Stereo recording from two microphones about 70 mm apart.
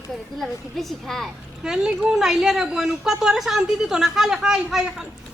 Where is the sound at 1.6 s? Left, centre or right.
Centre.